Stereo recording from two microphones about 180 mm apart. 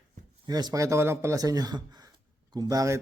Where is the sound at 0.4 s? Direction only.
20° right (ahead or behind).